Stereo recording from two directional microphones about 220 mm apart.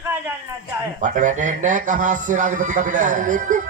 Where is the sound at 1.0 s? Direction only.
35° right (ahead or behind).